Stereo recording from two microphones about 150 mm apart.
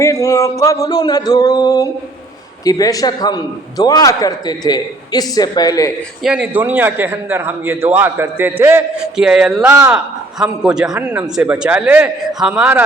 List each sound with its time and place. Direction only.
0.0 s a man's voice: 20° left (ahead or behind)
6.2 s a man's voice: 10° right (ahead or behind)
9.1 s music: 5° right (ahead or behind)
9.5 s a man's voice: 10° right (ahead or behind)